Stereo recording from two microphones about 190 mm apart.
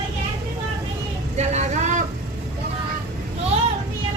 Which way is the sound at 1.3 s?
35° right (ahead or behind).